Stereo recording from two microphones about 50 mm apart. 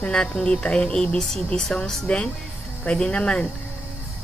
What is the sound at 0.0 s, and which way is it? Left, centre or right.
Speech, centre.